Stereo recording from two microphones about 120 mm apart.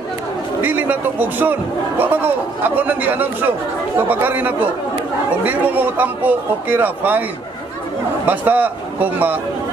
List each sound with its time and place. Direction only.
0.6 s a man's voice: 15° right (ahead or behind)
8.3 s a man's voice: 15° right (ahead or behind)